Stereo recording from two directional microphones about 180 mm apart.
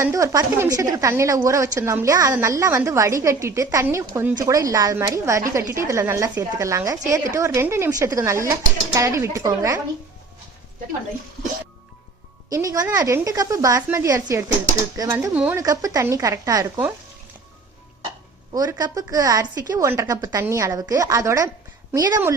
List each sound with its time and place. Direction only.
0.0 s speech: 15° right (ahead or behind)
12.5 s a woman's voice: 20° right (ahead or behind)
18.5 s a woman's voice: 20° right (ahead or behind)